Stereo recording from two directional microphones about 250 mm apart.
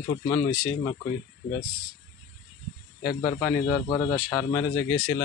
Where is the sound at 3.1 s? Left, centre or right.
Centre.